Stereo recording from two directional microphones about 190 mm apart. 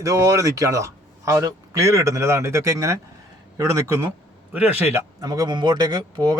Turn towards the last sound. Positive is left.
turn(degrees=-20)  # may be behind; listen again after turning